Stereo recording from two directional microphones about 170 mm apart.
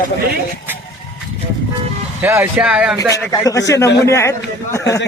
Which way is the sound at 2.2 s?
10° right (ahead or behind).